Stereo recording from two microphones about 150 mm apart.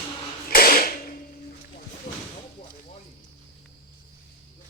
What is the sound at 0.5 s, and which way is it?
Mechanisms, 80° left.